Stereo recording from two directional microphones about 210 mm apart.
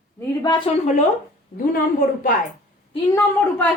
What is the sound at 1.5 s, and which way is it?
Speech, 40° left (ahead or behind).